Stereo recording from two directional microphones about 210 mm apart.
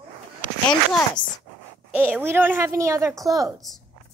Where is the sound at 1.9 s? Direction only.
10° right (ahead or behind).